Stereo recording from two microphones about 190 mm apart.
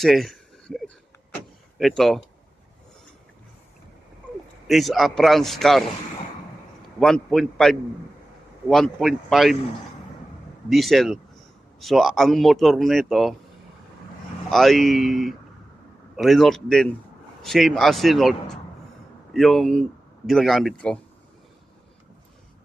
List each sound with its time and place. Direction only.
0.0 s a sound: centre (ahead or behind)
1.8 s speech: centre (ahead or behind)
4.7 s speech: centre (ahead or behind)
7.0 s speech: 5° left (ahead or behind)
10.7 s speech: centre (ahead or behind)
14.5 s speech: centre (ahead or behind)